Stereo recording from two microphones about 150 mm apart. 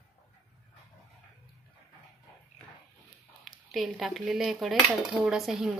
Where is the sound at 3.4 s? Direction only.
Centre (ahead or behind).